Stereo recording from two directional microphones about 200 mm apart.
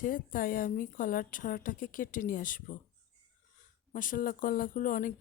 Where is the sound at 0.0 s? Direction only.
45° left (ahead or behind).